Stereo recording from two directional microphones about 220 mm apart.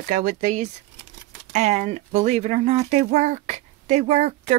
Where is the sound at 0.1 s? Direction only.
35° right (ahead or behind).